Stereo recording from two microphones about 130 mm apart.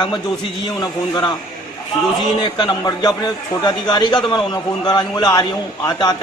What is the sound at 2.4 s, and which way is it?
A man's voice, 35° left (ahead or behind).